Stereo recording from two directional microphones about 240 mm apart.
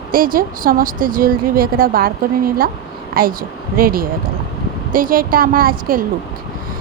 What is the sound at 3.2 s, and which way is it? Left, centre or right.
A woman's voice, right.